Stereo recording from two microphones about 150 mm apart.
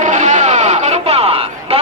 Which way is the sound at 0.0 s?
55° right (ahead or behind).